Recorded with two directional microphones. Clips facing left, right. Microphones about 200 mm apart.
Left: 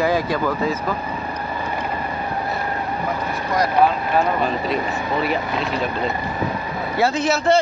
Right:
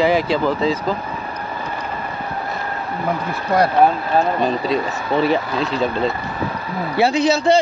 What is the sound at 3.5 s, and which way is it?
Speech, 55° right (ahead or behind).